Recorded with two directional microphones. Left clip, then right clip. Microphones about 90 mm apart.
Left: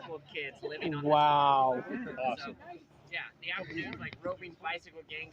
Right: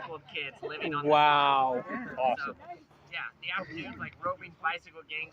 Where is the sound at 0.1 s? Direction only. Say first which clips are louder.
Right 2 dB; 10° left (ahead or behind).